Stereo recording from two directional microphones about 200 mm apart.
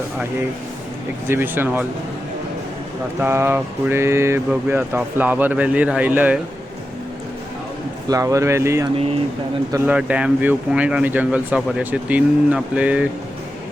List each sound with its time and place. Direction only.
1.3 s speech: 10° right (ahead or behind)
3.2 s speech: 10° right (ahead or behind)
8.0 s speech: 15° right (ahead or behind)